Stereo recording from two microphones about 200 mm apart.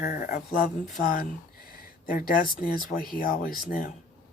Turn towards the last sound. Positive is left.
turn(degrees=45)  # may be behind; listen again after turning